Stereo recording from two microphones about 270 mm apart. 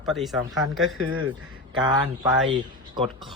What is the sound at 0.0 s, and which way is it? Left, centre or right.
Speech, centre.